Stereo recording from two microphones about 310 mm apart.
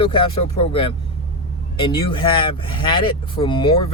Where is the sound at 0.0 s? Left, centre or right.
Centre.